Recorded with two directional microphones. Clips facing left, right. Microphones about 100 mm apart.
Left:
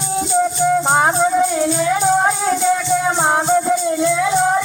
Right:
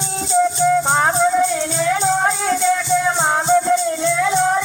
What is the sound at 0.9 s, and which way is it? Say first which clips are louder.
Music: left 1 dB; 10° left (ahead or behind).